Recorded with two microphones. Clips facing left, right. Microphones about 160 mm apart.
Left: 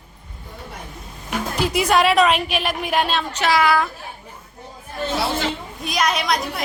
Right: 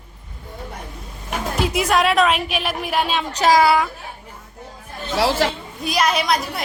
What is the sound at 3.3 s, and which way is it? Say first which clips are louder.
Speech: right 4 dB; 35° right (ahead or behind).